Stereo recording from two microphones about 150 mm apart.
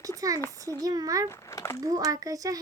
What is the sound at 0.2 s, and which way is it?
A child's voice, 25° right (ahead or behind).